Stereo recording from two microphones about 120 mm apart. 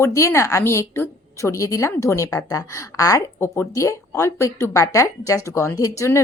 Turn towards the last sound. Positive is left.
turn(degrees=25)  # may be behind; listen again after turning